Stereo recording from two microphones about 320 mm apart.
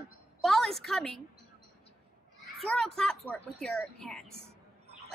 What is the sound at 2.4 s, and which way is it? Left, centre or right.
A child's voice, centre.